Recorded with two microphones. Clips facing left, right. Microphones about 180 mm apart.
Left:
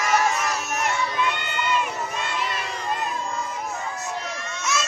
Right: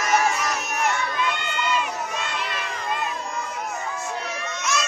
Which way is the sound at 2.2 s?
45° left (ahead or behind).